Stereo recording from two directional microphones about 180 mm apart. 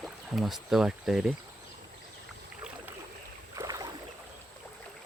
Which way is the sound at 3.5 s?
20° right (ahead or behind).